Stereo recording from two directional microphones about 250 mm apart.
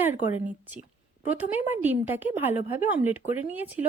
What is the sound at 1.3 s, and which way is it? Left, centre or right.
Speech, centre.